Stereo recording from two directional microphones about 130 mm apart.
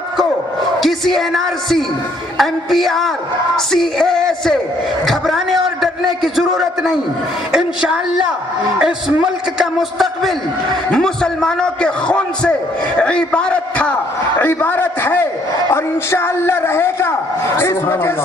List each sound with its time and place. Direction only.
0.8 s a man's voice: centre (ahead or behind)
3.5 s music: 5° left (ahead or behind)
5.0 s a man's voice: centre (ahead or behind); by 18.1 s 20° left (ahead or behind)